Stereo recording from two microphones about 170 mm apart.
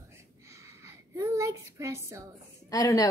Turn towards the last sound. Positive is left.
turn(degrees=20)  # may be behind; listen again after turning